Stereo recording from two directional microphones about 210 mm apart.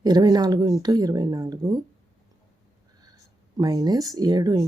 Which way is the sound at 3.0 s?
15° right (ahead or behind).